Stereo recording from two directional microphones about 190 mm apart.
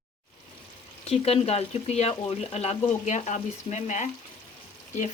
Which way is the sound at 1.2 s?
30° left (ahead or behind).